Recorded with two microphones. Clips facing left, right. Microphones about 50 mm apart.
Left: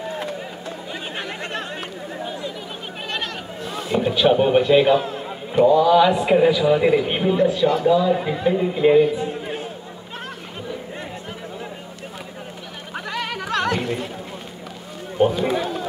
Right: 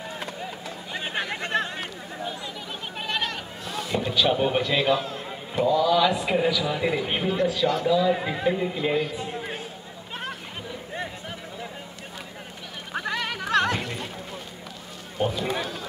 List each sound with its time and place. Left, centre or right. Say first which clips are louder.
1.8 s a sound: left 4 dB; centre
3.6 s a man's voice: left 6 dB; left
8.2 s a man's voice: left 4 dB; centre
8.5 s speech: left 5 dB; centre
8.8 s a man's voice: left 14 dB; centre
13.5 s music: even; centre
13.7 s a sound: left 7 dB; centre
15.1 s run: left 8 dB; left